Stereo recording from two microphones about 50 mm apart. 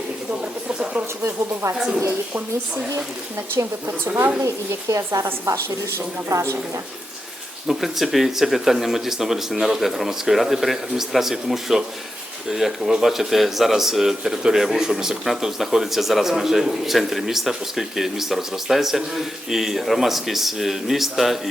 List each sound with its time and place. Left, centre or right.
0.3 s a sound: right
1.6 s a woman's voice: right
3.5 s a woman's voice: right
4.9 s speech: right
7.7 s speech: centre